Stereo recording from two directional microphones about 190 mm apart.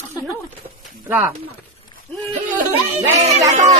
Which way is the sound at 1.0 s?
10° right (ahead or behind).